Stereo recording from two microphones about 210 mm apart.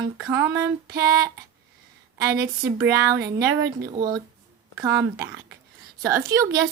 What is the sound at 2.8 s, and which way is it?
A woman's voice, 15° right (ahead or behind).